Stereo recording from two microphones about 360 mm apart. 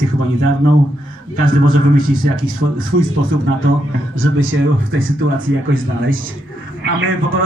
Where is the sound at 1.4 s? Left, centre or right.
Right.